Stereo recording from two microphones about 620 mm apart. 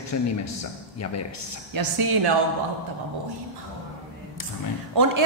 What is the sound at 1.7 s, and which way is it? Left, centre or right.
Speech, right.